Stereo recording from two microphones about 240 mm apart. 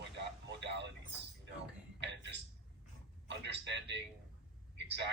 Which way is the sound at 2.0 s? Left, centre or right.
Right.